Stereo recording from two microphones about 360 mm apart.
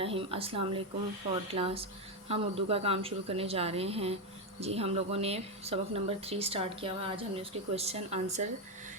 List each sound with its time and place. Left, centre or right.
0.0 s speech: centre